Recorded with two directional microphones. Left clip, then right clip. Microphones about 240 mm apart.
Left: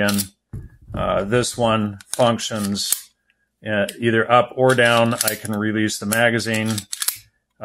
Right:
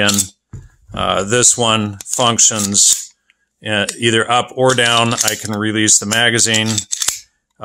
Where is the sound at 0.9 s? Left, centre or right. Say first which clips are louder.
Right 4 dB; right.